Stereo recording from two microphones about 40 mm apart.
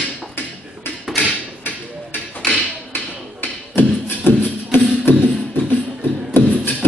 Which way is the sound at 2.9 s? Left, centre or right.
Left.